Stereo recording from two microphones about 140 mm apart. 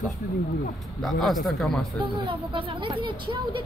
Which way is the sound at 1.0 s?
Centre (ahead or behind).